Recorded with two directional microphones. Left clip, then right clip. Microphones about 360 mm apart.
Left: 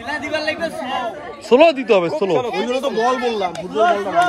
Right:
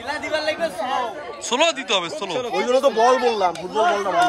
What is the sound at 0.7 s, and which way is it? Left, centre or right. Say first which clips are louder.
Speech: even; right.